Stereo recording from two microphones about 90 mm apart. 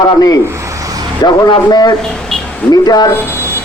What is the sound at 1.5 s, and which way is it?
Speech, 55° left (ahead or behind).